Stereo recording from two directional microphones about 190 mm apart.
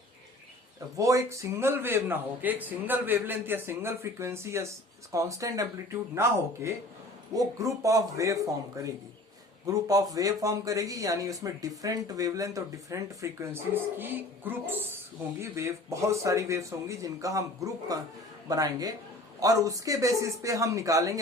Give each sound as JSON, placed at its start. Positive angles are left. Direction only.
{"t": 0.9, "sound": "a man's voice", "side_deg": -15}